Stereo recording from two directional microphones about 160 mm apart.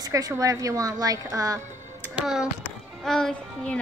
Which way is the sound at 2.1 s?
5° right (ahead or behind).